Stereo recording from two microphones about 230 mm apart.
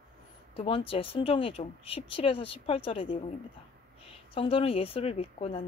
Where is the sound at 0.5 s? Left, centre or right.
Left.